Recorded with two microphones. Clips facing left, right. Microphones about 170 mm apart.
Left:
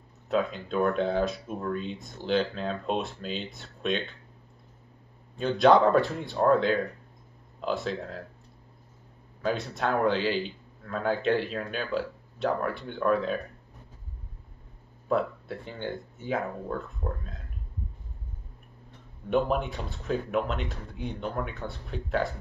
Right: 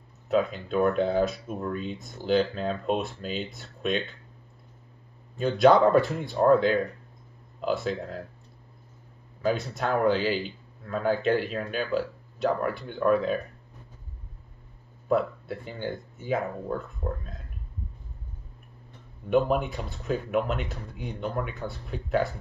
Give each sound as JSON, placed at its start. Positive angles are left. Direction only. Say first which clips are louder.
{"t": 0.3, "sound": "speech", "louder": "right 2 dB", "side_deg": -5}
{"t": 5.4, "sound": "speech", "louder": "right 1 dB", "side_deg": -5}
{"t": 9.4, "sound": "speech", "louder": "right 2 dB", "side_deg": -5}
{"t": 15.0, "sound": "speech", "louder": "right 2 dB", "side_deg": -10}
{"t": 19.3, "sound": "speech", "louder": "right 2 dB", "side_deg": -5}